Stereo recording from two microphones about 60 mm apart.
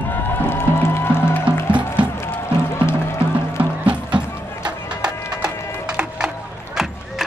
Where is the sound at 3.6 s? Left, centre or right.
Right.